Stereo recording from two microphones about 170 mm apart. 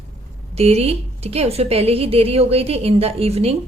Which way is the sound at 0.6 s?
40° right (ahead or behind).